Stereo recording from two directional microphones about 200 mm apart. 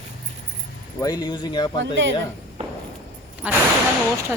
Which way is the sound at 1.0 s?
20° left (ahead or behind).